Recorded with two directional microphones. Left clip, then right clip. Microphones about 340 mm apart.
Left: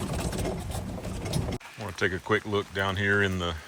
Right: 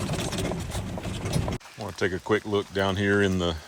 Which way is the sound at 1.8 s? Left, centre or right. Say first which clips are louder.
Right 1 dB; centre.